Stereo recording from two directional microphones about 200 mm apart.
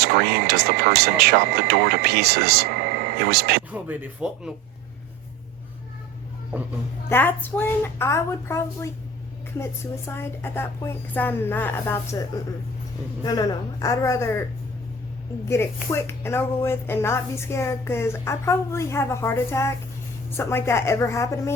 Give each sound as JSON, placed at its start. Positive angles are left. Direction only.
{"t": 0.0, "sound": "speech", "side_deg": -50}
{"t": 3.7, "sound": "speech", "side_deg": -10}
{"t": 7.1, "sound": "speech", "side_deg": 10}
{"t": 10.1, "sound": "speech", "side_deg": 10}
{"t": 13.2, "sound": "speech", "side_deg": 20}
{"t": 15.4, "sound": "speech", "side_deg": 15}